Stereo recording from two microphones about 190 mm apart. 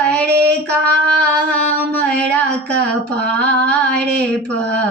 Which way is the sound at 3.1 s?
5° left (ahead or behind).